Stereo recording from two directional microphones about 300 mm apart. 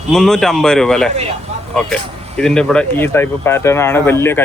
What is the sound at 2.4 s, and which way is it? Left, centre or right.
Speech, centre.